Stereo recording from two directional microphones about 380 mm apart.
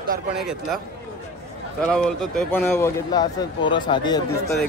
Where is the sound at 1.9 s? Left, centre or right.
Centre.